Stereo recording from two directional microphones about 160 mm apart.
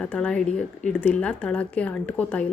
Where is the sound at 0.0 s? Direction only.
5° left (ahead or behind).